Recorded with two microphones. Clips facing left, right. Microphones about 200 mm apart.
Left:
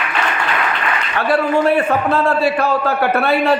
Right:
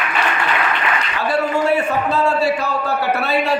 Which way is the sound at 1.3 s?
60° left (ahead or behind).